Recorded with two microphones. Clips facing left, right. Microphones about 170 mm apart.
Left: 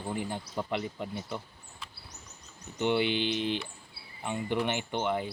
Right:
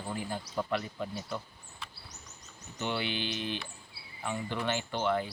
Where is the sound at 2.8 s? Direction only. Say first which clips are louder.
Left 6 dB; 20° left (ahead or behind).